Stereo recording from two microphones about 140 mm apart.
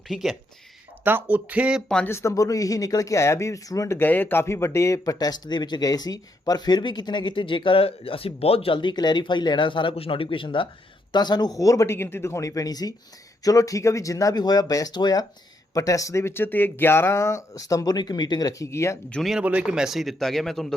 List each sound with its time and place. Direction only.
0.1 s speech: centre (ahead or behind)
1.0 s speech: 15° right (ahead or behind)
2.0 s speech: 20° left (ahead or behind)
19.1 s speech: centre (ahead or behind)